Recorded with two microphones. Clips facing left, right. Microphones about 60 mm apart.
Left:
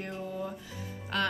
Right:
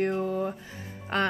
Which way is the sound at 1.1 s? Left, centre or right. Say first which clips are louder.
Right 4 dB; right.